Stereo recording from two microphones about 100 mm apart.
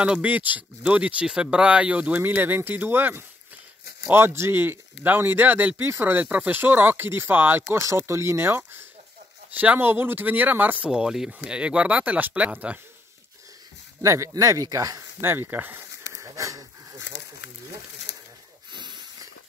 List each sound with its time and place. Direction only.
0.0 s speech: 15° right (ahead or behind)
14.0 s speech: 30° right (ahead or behind)
16.2 s goose: 35° right (ahead or behind)
18.7 s a sound: 50° right (ahead or behind)